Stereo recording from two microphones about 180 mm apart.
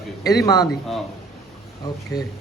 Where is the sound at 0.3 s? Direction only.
20° left (ahead or behind).